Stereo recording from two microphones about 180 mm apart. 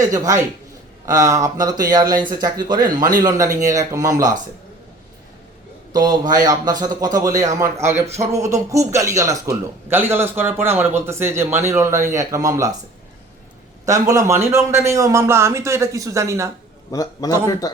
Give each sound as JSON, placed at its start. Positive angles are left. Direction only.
{"t": 0.0, "sound": "a man's voice", "side_deg": -20}
{"t": 5.9, "sound": "a man's voice", "side_deg": -20}
{"t": 13.8, "sound": "a man's voice", "side_deg": -15}
{"t": 16.9, "sound": "a man's voice", "side_deg": 20}